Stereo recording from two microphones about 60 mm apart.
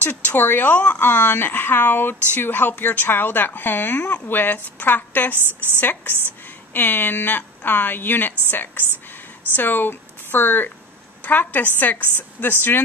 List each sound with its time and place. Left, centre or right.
0.0 s speech: left